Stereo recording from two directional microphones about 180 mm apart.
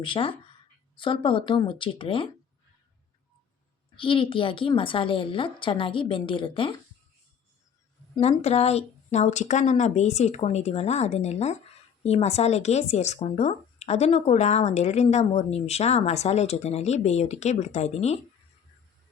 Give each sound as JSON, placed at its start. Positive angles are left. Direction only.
{"t": 0.0, "sound": "a woman's voice", "side_deg": 30}
{"t": 3.9, "sound": "a woman's voice", "side_deg": 30}
{"t": 8.2, "sound": "speech", "side_deg": 35}